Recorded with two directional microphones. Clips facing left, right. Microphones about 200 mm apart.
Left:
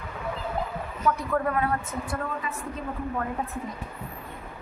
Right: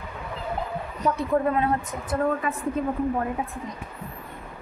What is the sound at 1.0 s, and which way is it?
Speech, 25° right (ahead or behind).